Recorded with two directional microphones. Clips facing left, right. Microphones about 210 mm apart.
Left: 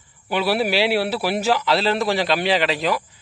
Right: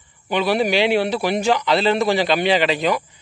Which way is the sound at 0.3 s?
5° left (ahead or behind).